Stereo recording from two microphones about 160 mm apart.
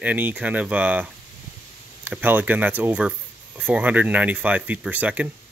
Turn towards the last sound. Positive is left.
turn(degrees=-10)  # may be behind; listen again after turning